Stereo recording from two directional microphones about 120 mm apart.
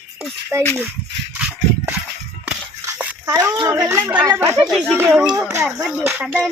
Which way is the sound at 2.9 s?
10° right (ahead or behind).